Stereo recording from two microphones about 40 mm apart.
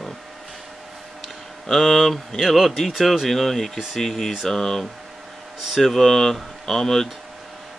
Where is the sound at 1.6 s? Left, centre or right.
Centre.